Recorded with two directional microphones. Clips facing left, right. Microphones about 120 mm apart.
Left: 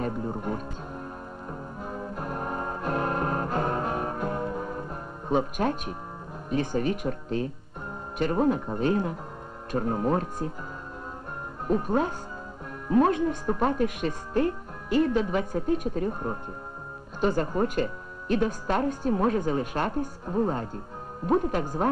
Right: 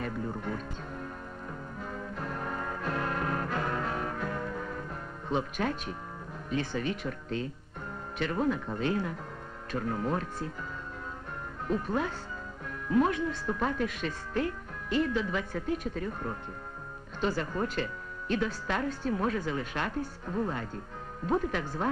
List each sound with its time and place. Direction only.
0.0 s music: 30° left (ahead or behind)
5.3 s speech: 35° left (ahead or behind)
11.6 s speech: 40° left (ahead or behind)
13.1 s speech: 40° left (ahead or behind)
17.2 s speech: 40° left (ahead or behind)
21.5 s speech: 45° left (ahead or behind)